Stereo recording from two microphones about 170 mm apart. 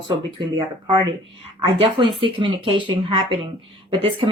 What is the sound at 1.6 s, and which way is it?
Speech, 25° right (ahead or behind).